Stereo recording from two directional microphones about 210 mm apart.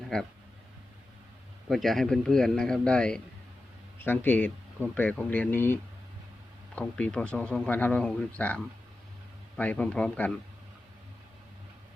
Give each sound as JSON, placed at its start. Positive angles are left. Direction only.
{"t": 0.1, "sound": "a man's voice", "side_deg": 0}
{"t": 1.7, "sound": "a man's voice", "side_deg": 0}